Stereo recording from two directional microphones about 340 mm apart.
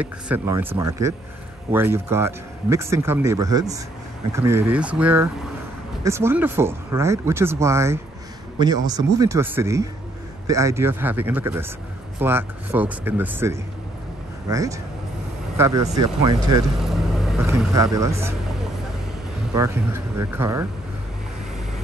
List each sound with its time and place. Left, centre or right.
0.0 s speech: centre
16.7 s vehicle: centre
19.5 s speech: centre